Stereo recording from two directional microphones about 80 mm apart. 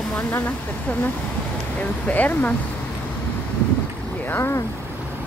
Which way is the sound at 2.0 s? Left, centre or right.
Left.